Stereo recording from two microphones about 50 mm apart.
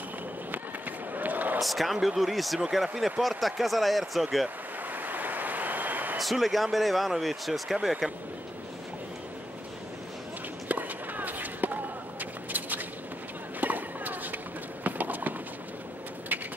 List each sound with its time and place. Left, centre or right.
0.5 s run: right
1.6 s speech: centre
5.0 s a sound: right
6.1 s speech: centre
10.7 s a sound: right
13.6 s run: right